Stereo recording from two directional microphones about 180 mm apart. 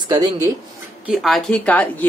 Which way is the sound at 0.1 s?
20° right (ahead or behind).